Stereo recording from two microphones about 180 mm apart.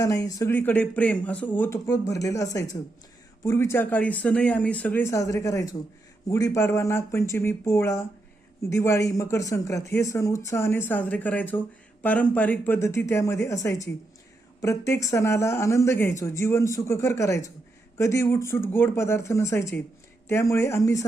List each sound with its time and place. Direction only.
0.0 s speech: 20° left (ahead or behind)